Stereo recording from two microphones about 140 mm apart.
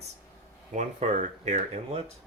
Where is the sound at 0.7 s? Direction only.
55° right (ahead or behind).